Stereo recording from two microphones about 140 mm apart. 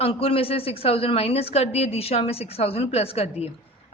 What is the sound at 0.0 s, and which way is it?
A woman's voice, 45° left (ahead or behind).